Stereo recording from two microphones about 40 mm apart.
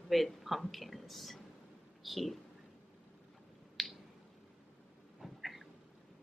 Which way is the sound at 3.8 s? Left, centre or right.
Centre.